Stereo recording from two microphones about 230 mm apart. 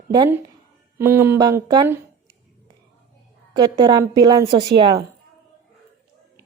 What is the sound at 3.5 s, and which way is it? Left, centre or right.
Speech, centre.